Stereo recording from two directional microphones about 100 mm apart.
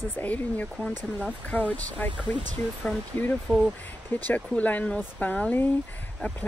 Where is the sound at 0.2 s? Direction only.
15° left (ahead or behind).